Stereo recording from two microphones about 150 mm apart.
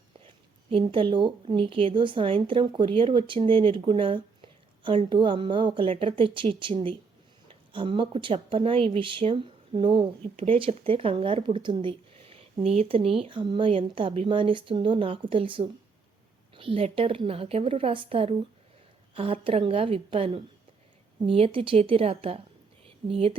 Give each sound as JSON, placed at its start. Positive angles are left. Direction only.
{"t": 0.3, "sound": "speech", "side_deg": -35}